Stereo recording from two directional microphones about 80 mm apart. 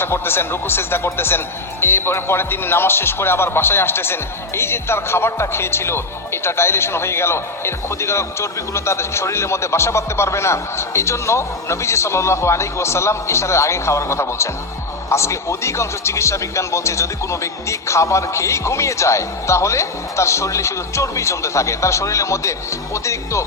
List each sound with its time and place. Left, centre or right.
0.0 s speech: left